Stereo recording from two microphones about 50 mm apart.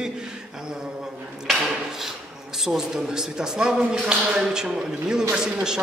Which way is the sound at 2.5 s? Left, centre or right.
Centre.